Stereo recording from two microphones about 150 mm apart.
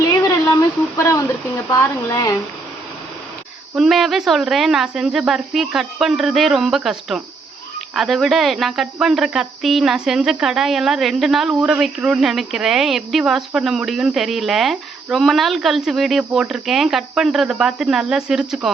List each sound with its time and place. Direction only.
0.9 s a sound: 20° left (ahead or behind)
1.7 s speech: 20° left (ahead or behind)
3.8 s speech: centre (ahead or behind)